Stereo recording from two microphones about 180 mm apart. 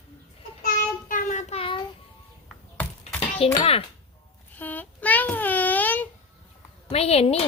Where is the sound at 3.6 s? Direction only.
35° left (ahead or behind).